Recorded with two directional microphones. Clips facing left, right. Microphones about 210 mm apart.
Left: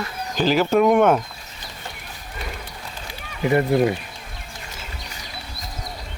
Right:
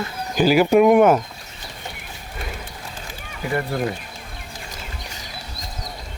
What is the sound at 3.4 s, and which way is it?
Speech, 20° left (ahead or behind).